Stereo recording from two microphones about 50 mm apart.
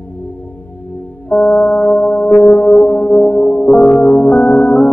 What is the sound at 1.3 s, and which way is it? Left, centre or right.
Music, left.